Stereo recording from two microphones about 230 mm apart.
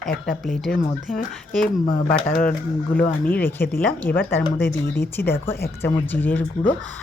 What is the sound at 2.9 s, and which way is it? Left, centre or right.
Speech, centre.